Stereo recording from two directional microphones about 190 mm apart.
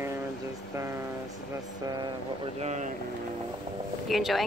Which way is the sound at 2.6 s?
35° right (ahead or behind).